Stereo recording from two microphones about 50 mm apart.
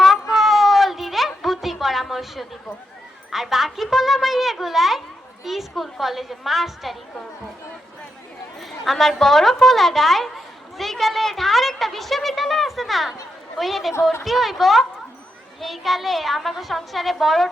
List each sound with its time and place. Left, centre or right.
0.0 s a sound: centre
3.3 s a woman's voice: centre
8.8 s a woman's voice: centre